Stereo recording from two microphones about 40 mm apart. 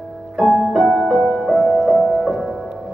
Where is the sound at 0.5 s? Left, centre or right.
Centre.